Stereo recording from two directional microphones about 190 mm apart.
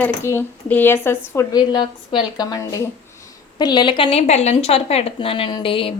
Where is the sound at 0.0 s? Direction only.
15° left (ahead or behind).